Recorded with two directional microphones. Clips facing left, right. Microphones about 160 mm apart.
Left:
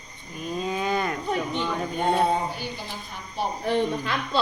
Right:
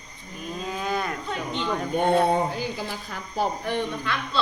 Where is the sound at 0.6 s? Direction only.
Centre (ahead or behind).